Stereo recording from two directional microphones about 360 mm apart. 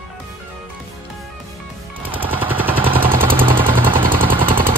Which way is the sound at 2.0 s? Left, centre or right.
Centre.